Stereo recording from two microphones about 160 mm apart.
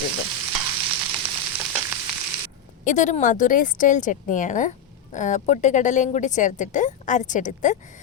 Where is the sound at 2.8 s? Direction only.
50° left (ahead or behind).